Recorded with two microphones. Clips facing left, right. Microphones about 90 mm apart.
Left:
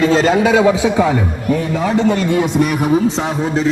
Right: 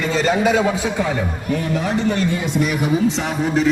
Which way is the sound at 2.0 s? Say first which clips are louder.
Left 5 dB; 70° left (ahead or behind).